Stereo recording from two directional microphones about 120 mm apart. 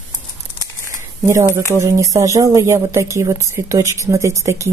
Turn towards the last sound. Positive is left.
turn(degrees=-25)  # may be behind; listen again after turning